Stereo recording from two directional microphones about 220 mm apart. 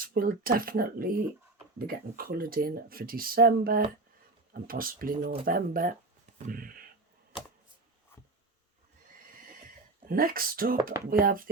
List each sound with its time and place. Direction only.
0.0 s speech: 40° right (ahead or behind)
10.1 s speech: 40° right (ahead or behind)